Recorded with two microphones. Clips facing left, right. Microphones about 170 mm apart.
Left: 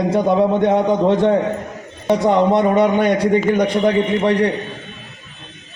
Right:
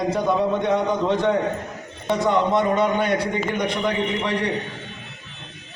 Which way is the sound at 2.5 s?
60° left (ahead or behind).